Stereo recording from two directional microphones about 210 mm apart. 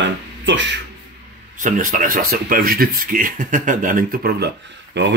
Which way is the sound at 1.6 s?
40° right (ahead or behind).